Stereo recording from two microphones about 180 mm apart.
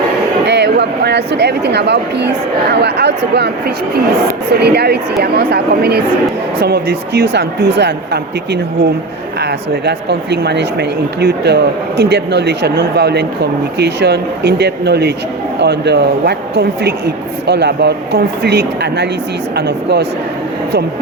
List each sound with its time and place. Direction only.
0.4 s speech: 70° right (ahead or behind)
4.6 s speech: 65° right (ahead or behind)
9.4 s speech: 65° right (ahead or behind)